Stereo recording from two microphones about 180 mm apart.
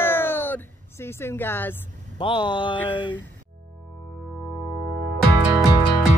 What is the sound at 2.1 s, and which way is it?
Speech, 25° left (ahead or behind).